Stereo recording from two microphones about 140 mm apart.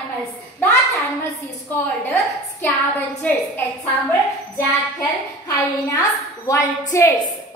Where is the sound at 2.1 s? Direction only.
15° left (ahead or behind).